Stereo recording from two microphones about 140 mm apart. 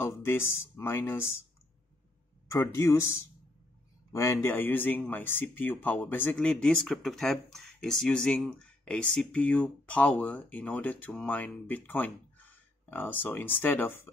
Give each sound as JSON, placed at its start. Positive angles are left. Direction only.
{"t": 0.0, "sound": "speech", "side_deg": 20}
{"t": 2.5, "sound": "speech", "side_deg": 20}